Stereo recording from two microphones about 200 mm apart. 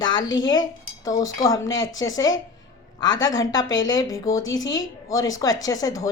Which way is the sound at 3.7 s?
70° left (ahead or behind).